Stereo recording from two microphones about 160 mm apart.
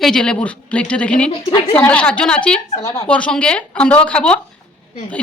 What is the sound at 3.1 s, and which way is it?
Speech, 5° left (ahead or behind).